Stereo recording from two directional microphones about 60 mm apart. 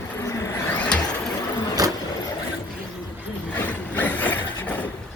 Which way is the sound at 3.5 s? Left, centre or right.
Left.